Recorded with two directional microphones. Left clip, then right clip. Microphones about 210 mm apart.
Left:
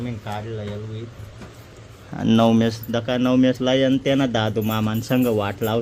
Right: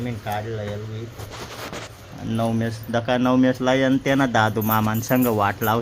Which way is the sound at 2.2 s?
45° left (ahead or behind).